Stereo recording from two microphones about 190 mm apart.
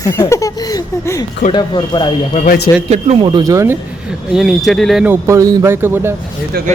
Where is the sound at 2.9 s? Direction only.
30° right (ahead or behind); by 3.7 s 15° right (ahead or behind).